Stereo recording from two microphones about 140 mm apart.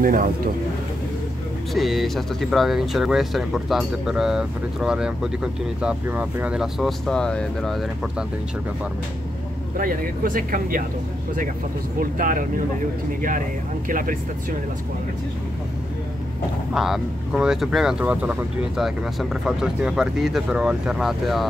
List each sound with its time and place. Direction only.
0.0 s speech: 75° right (ahead or behind)
1.7 s speech: centre (ahead or behind)
9.8 s speech: 80° right
12.0 s speech: 75° right (ahead or behind)
13.8 s speech: 80° right
16.7 s speech: 5° right (ahead or behind)